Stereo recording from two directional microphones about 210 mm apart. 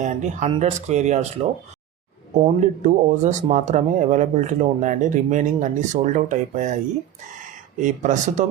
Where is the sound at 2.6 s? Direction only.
35° right (ahead or behind).